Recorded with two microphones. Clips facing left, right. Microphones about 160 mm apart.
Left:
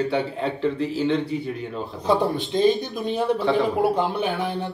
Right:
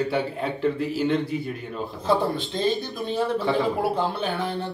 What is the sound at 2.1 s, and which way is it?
Speech, 15° left (ahead or behind).